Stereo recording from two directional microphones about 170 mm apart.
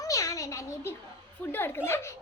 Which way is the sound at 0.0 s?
20° left (ahead or behind).